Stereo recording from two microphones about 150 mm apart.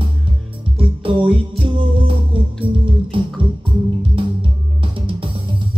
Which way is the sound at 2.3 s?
35° right (ahead or behind).